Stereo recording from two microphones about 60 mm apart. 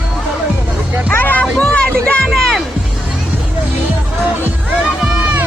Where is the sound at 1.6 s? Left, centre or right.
Left.